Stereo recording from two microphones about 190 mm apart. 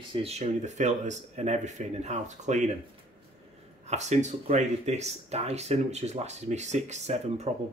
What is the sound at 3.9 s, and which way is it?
Speech, 35° right (ahead or behind).